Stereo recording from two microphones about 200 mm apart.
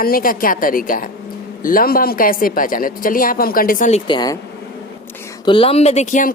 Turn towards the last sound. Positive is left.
turn(degrees=40)  # may be behind; listen again after turning